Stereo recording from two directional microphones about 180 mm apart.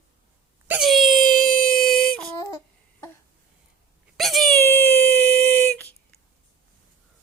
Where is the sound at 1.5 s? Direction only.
50° left (ahead or behind).